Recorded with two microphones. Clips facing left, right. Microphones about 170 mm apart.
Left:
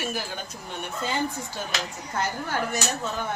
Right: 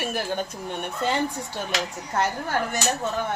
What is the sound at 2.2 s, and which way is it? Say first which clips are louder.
Speech: right 3 dB; 50° right (ahead or behind).